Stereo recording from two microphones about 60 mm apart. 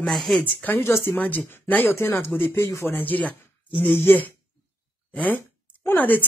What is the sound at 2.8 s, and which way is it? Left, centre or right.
Speech, left.